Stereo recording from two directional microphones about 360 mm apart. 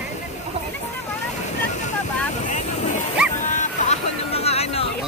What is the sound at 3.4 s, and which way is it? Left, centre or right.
Vehicle, left.